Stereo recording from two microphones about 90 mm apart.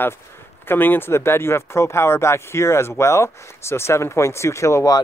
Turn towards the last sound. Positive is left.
turn(degrees=35)  # may be behind; listen again after turning